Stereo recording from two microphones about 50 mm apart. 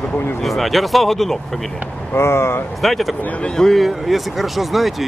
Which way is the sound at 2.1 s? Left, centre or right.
Left.